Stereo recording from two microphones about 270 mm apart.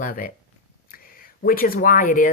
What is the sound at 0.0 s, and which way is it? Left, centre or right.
Speech, left.